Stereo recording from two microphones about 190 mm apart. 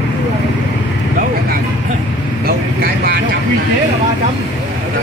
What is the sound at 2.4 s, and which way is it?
Speech, 55° right (ahead or behind).